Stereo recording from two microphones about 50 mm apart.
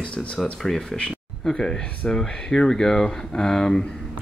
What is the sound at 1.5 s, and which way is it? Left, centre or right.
Speech, centre.